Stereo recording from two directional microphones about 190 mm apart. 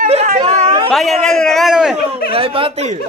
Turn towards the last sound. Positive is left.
turn(degrees=-35)  # may be behind; listen again after turning